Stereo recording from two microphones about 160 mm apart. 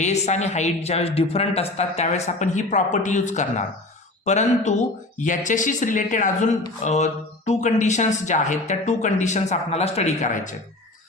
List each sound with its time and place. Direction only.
0.0 s speech: 45° left (ahead or behind)